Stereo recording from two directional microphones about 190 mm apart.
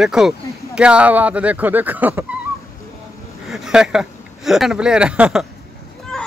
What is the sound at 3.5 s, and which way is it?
Speech, centre (ahead or behind).